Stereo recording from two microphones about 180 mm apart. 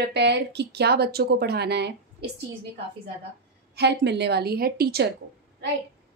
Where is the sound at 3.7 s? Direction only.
70° right (ahead or behind).